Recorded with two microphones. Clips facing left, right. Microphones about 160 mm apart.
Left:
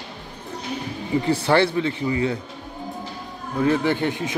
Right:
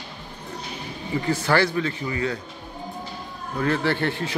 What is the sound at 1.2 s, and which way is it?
Speech, 25° left (ahead or behind).